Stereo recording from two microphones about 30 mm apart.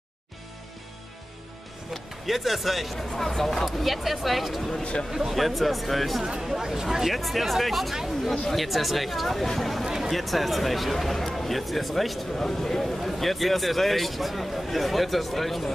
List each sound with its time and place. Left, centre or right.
2.2 s a man's voice: centre
3.6 s a man's voice: centre
6.4 s speech: centre
7.2 s a man's voice: centre
7.9 s speech: centre
8.5 s a man's voice: centre
9.8 s a sound: centre
10.1 s a man's voice: centre
12.4 s speech: centre
12.8 s a man's voice: centre